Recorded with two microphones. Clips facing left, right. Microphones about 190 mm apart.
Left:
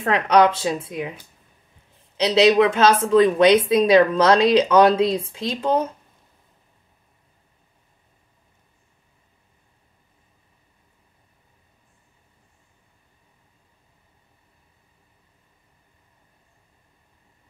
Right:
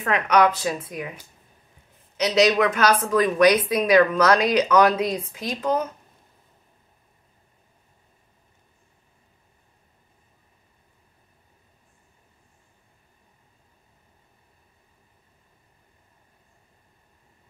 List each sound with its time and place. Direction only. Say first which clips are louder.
0.0 s speech: left 3 dB; 30° left (ahead or behind)
2.1 s speech: left 4 dB; 30° left (ahead or behind)